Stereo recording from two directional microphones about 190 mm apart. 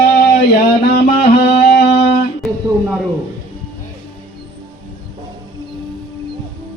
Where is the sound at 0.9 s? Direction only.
55° left (ahead or behind).